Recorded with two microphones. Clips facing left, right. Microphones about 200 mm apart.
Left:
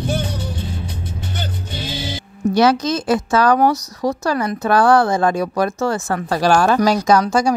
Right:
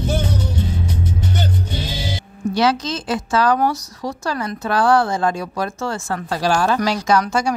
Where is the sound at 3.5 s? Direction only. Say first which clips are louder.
Left 4 dB; 45° left (ahead or behind).